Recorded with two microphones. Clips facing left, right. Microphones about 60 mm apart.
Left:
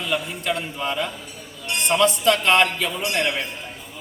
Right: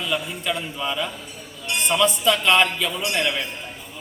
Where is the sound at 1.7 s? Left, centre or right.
Centre.